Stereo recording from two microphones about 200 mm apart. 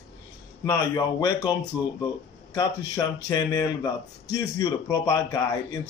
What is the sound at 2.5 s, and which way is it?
Speech, 20° left (ahead or behind).